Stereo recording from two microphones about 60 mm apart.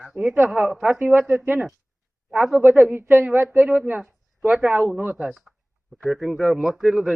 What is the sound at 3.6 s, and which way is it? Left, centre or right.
Speech, right.